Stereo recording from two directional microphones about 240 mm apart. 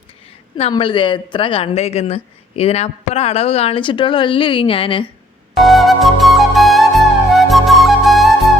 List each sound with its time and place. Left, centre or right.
0.5 s a woman's voice: left
5.5 s flute: centre